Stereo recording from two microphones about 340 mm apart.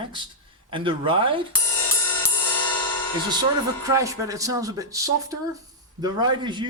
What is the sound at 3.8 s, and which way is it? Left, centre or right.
Speech, centre.